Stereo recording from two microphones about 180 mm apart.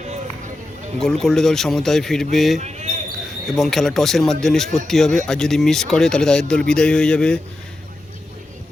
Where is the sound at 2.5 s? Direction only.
40° right (ahead or behind).